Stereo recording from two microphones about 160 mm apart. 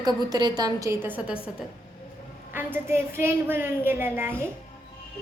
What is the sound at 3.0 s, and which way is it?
A child's voice, 15° right (ahead or behind).